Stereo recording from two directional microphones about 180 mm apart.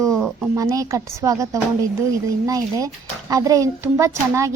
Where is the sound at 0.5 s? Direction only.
20° right (ahead or behind).